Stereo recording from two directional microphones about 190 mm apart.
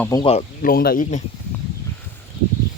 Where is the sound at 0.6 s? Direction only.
50° left (ahead or behind).